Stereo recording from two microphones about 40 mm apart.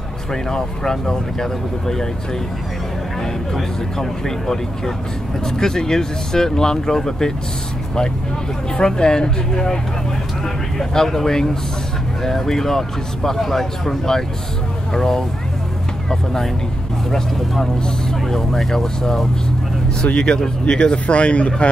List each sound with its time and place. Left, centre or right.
0.3 s speech: centre
3.2 s speech: centre
8.7 s speech: centre
10.8 s speech: centre
17.8 s speech: centre
20.0 s speech: left